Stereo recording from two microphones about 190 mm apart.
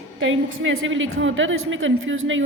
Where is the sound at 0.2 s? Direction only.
90° right.